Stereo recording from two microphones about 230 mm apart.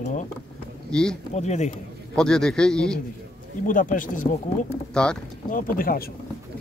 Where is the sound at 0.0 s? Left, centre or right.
Left.